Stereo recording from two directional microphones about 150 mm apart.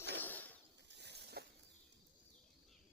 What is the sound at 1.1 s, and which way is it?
Snake, 90° right.